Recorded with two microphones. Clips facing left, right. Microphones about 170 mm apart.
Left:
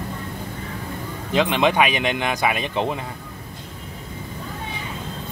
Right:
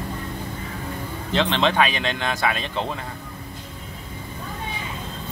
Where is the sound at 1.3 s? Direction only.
10° left (ahead or behind).